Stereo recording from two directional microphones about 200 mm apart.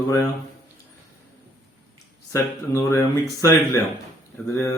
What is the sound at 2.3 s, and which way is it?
Speech, 15° left (ahead or behind).